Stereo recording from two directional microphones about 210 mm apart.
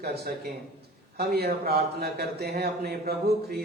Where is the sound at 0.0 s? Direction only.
50° right (ahead or behind).